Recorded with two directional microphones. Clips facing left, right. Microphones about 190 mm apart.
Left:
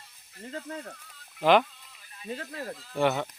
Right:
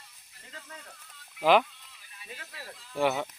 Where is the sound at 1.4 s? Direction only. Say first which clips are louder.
Left 1 dB; 5° right (ahead or behind).